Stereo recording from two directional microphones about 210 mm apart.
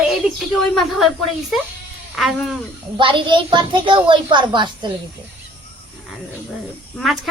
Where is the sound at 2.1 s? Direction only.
Centre (ahead or behind).